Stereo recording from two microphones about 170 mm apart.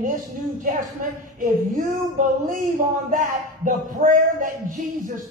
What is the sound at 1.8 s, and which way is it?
Speech, 50° right (ahead or behind).